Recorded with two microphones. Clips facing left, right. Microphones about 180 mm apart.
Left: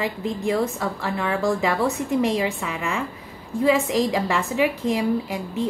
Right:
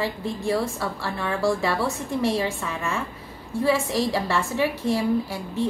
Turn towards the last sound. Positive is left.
turn(degrees=15)  # may be behind; listen again after turning